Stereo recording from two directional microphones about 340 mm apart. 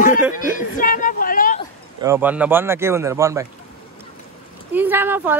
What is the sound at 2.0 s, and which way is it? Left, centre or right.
Speech, centre.